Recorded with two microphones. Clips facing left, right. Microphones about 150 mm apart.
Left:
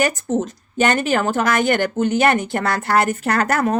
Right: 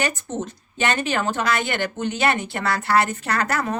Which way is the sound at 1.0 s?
45° left (ahead or behind).